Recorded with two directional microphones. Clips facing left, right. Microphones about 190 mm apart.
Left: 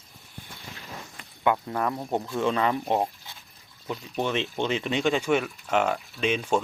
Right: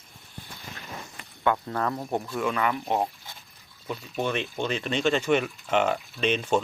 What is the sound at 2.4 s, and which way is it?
Speech, 30° left (ahead or behind).